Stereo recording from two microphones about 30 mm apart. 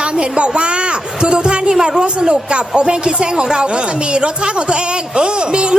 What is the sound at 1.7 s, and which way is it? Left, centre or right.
Speech, right.